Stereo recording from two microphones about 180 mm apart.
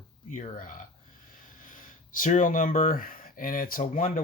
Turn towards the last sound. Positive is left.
turn(degrees=50)  # may be behind; listen again after turning